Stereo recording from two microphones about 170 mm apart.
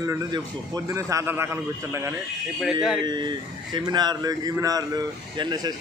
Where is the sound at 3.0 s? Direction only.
25° right (ahead or behind).